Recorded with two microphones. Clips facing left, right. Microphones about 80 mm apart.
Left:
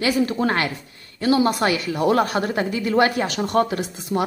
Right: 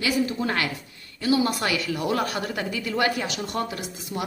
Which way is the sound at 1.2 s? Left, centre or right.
Left.